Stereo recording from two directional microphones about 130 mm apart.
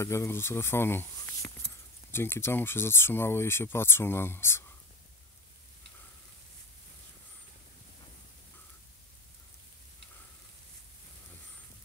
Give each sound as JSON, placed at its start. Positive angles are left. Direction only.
{"t": 0.0, "sound": "speech", "side_deg": 20}